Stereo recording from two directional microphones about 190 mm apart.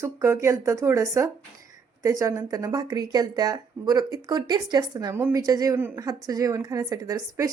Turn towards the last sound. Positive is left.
turn(degrees=-20)  # may be behind; listen again after turning